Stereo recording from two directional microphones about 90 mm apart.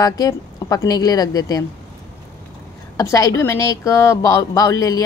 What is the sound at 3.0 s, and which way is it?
Speech, 40° left (ahead or behind).